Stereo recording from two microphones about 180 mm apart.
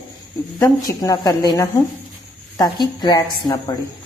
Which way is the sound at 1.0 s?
20° left (ahead or behind).